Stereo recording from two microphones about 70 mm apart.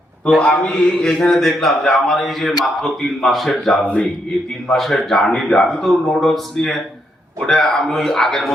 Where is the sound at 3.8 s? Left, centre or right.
Centre.